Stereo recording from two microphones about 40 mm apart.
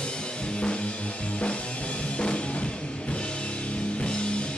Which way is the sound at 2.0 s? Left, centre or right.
Left.